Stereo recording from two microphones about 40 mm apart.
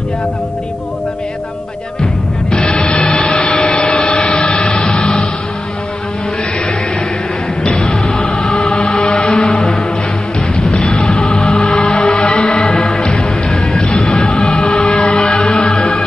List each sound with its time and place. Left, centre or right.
2.5 s music: left
7.7 s music: centre
8.4 s music: left
9.6 s music: left
12.0 s music: centre
12.3 s music: left
13.8 s music: left
15.2 s music: centre